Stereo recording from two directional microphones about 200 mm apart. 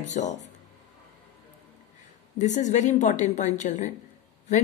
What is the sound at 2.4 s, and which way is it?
A woman's voice, 40° left (ahead or behind).